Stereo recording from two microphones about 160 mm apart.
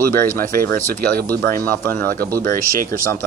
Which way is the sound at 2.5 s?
60° right (ahead or behind).